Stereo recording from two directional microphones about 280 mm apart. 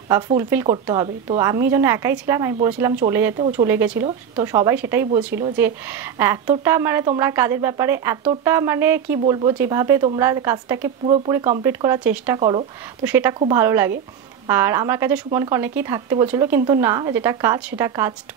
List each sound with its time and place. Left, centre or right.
0.4 s speech: centre
12.4 s speech: centre
13.0 s speech: centre